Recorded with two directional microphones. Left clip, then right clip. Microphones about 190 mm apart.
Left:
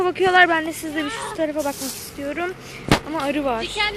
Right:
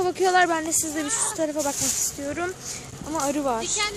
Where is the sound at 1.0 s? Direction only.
70° right (ahead or behind).